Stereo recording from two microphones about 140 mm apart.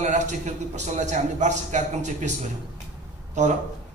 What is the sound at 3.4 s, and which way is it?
Speech, 60° right (ahead or behind).